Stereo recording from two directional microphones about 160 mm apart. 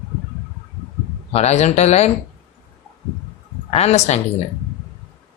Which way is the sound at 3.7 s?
40° left (ahead or behind).